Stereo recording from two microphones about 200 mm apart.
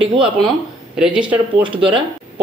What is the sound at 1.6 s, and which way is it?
Speech, 25° right (ahead or behind).